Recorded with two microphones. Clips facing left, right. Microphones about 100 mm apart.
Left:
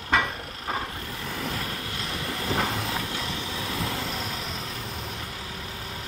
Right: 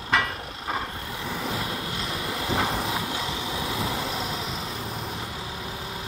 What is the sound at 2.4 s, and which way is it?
Vehicle, 10° right (ahead or behind).